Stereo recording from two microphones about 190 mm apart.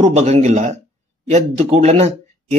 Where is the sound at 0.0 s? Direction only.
35° right (ahead or behind).